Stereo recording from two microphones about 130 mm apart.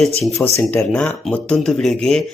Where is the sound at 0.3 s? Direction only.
20° left (ahead or behind).